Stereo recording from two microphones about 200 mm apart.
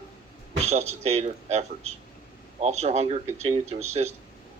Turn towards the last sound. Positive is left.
turn(degrees=-35)  # may be behind; listen again after turning